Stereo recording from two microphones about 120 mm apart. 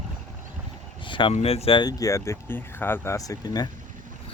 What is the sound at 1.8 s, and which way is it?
Speech, 25° left (ahead or behind).